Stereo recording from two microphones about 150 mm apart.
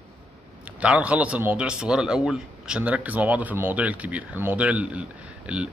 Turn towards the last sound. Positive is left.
turn(degrees=-10)  # may be behind; listen again after turning